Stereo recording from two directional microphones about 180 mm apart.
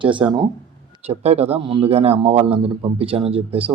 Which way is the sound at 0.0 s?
25° right (ahead or behind).